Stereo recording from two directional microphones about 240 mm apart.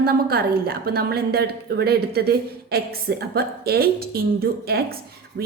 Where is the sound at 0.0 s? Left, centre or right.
Right.